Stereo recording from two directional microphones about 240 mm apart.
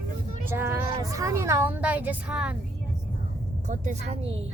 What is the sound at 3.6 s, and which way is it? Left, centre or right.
Speech, right.